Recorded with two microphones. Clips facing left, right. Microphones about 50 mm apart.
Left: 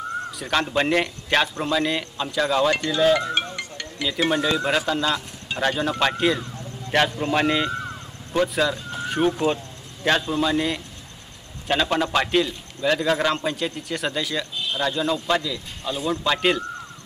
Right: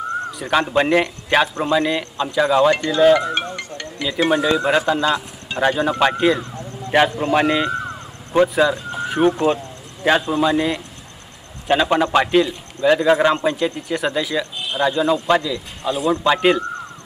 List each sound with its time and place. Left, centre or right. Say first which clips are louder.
0.3 s a man's voice: right 5 dB; centre
7.8 s vehicle: right 4 dB; centre
8.6 s a sound: right 5 dB; centre
10.0 s a man's voice: right 5 dB; centre